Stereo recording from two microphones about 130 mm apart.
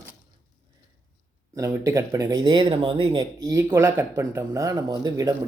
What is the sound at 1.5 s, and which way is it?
Speech, 25° right (ahead or behind).